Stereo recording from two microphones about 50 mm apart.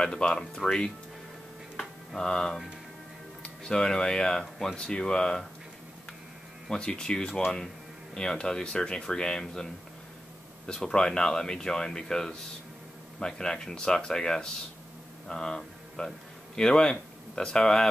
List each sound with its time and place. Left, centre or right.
0.0 s speech: left
1.8 s a sound: centre
3.4 s speech: centre
6.7 s speech: centre
10.7 s speech: centre